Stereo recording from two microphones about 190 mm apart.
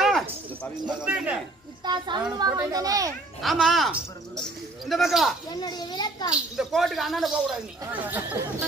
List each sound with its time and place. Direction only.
1.0 s speech: 5° right (ahead or behind)
1.9 s a child's voice: 20° right (ahead or behind)
3.4 s speech: centre (ahead or behind)
5.5 s a child's voice: 20° left (ahead or behind)
6.3 s speech: 5° right (ahead or behind)
7.8 s speech: 15° right (ahead or behind)